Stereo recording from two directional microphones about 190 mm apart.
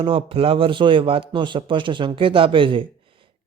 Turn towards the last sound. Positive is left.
turn(degrees=-25)  # may be behind; listen again after turning